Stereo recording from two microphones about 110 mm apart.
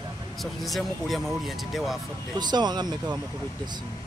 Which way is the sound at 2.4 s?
40° right (ahead or behind).